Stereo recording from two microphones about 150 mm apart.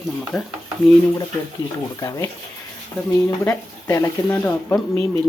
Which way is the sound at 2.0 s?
20° left (ahead or behind).